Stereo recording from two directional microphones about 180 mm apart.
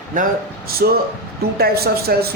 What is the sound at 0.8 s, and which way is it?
A man's voice, 60° right (ahead or behind).